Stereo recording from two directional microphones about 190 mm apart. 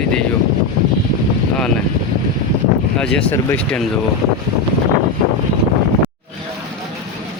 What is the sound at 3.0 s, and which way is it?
Speech, 5° left (ahead or behind).